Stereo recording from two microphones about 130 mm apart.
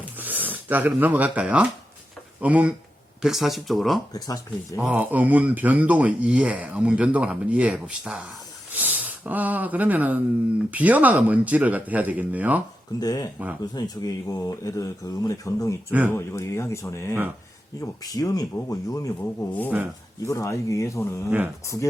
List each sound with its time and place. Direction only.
0.2 s speech: 15° right (ahead or behind)
4.1 s speech: 30° left (ahead or behind)
4.8 s speech: 10° right (ahead or behind)
13.0 s speech: 30° left (ahead or behind)
15.9 s speech: 10° right (ahead or behind)
16.1 s speech: 25° left (ahead or behind)
21.2 s speech: 15° right (ahead or behind)